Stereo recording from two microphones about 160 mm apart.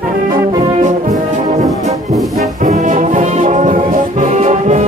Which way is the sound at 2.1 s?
Centre (ahead or behind).